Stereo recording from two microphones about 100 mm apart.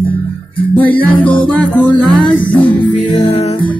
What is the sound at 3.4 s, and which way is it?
Music, 90° left.